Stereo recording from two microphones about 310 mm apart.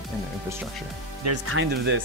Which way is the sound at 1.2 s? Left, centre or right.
Right.